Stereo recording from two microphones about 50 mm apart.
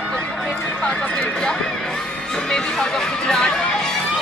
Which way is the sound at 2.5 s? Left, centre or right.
Centre.